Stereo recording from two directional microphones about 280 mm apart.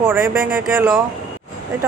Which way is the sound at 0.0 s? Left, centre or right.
Centre.